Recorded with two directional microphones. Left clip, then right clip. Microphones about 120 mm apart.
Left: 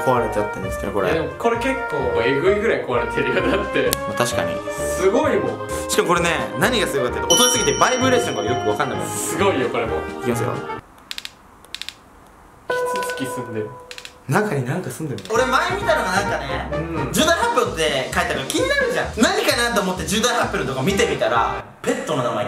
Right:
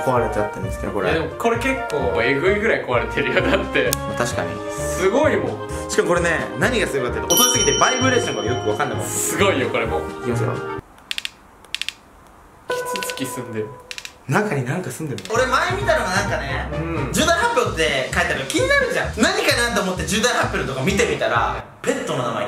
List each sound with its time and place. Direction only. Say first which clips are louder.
0.0 s speech: even; 10° left (ahead or behind)
1.1 s speech: even; 15° right (ahead or behind)
2.0 s speech: even; centre (ahead or behind)
4.1 s speech: left 2 dB; 10° left (ahead or behind)
4.5 s speech: left 2 dB; centre (ahead or behind)
5.8 s speech: even; 15° left (ahead or behind); by 9.8 s 5° right (ahead or behind)
10.2 s speech: left 1 dB; 15° left (ahead or behind)
12.6 s music: left 3 dB; centre (ahead or behind)
14.3 s speech: even; 10° left (ahead or behind)